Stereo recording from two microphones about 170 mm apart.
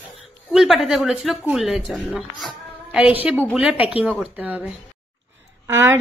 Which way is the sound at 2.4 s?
5° right (ahead or behind).